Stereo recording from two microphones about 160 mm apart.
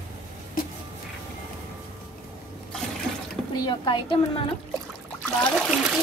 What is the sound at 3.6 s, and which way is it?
Speech, 30° left (ahead or behind).